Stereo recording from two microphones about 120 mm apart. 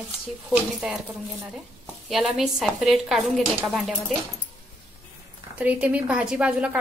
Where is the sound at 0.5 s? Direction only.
5° right (ahead or behind).